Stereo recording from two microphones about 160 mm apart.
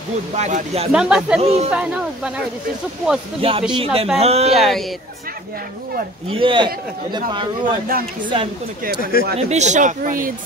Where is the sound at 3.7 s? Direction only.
35° right (ahead or behind).